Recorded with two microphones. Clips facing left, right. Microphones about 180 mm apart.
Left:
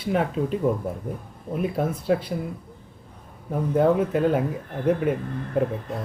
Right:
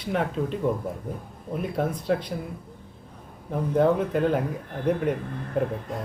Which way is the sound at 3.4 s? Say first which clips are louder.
Left 1 dB; 5° left (ahead or behind).